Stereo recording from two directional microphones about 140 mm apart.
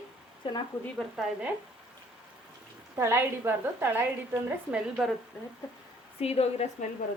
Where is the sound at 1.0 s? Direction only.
Centre (ahead or behind).